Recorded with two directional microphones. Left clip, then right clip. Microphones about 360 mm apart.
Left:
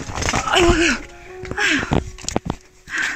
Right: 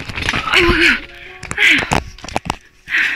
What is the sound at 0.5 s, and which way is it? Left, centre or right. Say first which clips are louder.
Speech: right 4 dB; centre.